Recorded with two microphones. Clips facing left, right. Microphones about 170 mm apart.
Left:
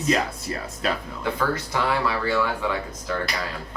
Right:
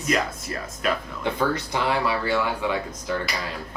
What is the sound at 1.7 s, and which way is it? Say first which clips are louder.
Speech: even; 15° right (ahead or behind).